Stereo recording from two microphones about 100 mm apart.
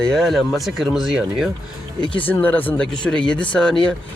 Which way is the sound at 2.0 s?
55° left (ahead or behind).